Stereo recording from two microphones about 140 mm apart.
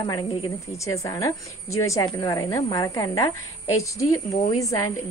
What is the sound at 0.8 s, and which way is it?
A woman's voice, 25° left (ahead or behind).